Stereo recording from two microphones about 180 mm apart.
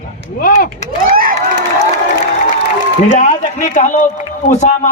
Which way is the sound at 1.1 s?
55° right (ahead or behind).